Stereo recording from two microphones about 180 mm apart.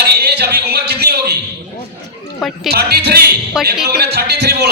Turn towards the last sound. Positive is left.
turn(degrees=-65)  # may be behind; listen again after turning